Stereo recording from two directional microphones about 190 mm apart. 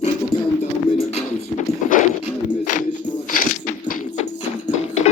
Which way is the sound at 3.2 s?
45° left (ahead or behind).